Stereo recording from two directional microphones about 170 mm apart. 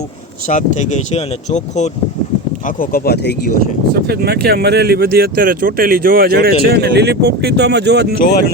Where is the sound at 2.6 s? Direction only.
55° left (ahead or behind); by 3.5 s 75° left (ahead or behind).